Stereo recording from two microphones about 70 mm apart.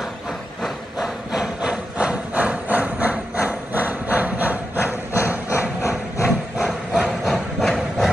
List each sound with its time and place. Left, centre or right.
0.9 s wood: centre
5.5 s vehicle: left
6.2 s a sound: centre